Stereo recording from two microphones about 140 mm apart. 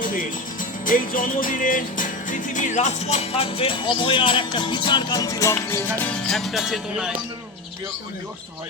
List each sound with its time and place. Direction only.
0.0 s music: 75° left (ahead or behind); by 5.8 s 20° left (ahead or behind)
6.1 s music: 5° left (ahead or behind)